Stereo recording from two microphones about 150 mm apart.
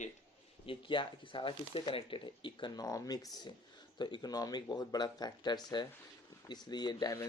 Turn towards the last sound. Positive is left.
turn(degrees=25)  # may be behind; listen again after turning